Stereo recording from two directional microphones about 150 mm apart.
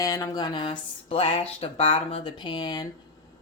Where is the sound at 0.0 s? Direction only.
25° left (ahead or behind).